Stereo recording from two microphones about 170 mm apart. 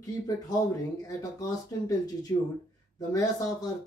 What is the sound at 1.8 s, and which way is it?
Speech, 20° left (ahead or behind).